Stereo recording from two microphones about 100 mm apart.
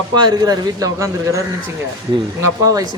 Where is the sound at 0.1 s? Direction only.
45° right (ahead or behind).